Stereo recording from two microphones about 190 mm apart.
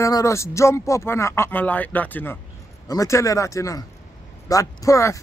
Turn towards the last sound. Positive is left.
turn(degrees=15)  # may be behind; listen again after turning